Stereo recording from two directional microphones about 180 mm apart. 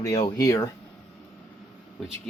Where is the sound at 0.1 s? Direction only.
35° left (ahead or behind).